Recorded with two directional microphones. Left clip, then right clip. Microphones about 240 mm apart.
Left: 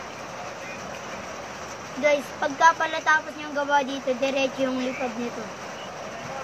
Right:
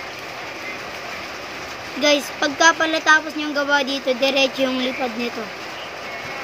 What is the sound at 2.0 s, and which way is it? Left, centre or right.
Speech, right.